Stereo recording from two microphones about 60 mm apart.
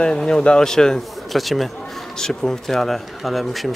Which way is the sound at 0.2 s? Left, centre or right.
Centre.